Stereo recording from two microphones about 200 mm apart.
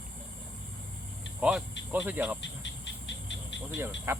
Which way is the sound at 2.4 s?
65° left (ahead or behind).